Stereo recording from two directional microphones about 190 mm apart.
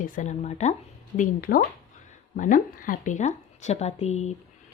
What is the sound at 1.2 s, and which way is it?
Speech, 50° left (ahead or behind).